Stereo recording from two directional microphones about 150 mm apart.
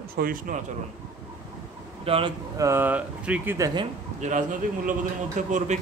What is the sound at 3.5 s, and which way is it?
Speech, 25° right (ahead or behind).